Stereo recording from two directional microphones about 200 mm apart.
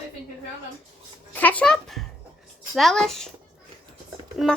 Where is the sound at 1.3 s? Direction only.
10° left (ahead or behind).